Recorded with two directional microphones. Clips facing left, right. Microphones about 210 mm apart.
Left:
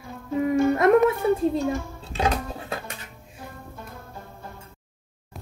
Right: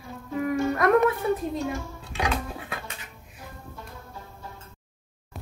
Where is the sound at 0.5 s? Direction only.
25° left (ahead or behind).